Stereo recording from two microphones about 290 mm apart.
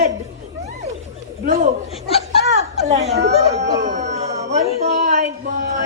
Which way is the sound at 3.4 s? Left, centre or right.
Right.